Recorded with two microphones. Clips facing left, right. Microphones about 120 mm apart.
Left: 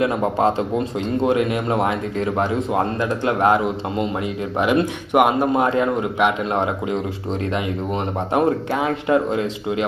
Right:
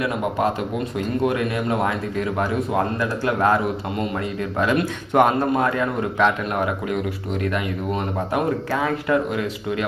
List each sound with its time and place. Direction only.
0.0 s a man's voice: 25° left (ahead or behind)
8.7 s a man's voice: 20° left (ahead or behind)